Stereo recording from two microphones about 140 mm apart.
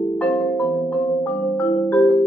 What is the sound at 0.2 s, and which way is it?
Marimba, 10° left (ahead or behind).